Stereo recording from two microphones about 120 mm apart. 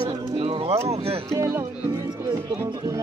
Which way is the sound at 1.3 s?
20° right (ahead or behind).